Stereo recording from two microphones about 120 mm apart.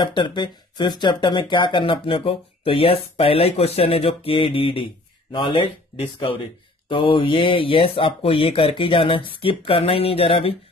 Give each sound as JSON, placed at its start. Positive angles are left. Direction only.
{"t": 0.0, "sound": "speech", "side_deg": 40}